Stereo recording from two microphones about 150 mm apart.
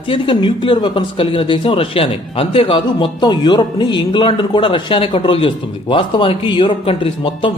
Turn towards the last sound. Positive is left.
turn(degrees=35)  # may be behind; listen again after turning